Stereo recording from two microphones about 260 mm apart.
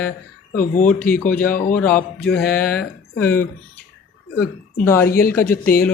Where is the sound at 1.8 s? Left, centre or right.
Centre.